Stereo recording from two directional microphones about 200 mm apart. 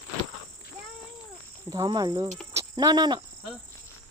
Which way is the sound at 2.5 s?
15° right (ahead or behind).